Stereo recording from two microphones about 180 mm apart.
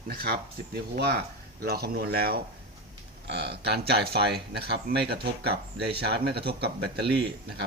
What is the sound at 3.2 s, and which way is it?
Speech, 70° right (ahead or behind).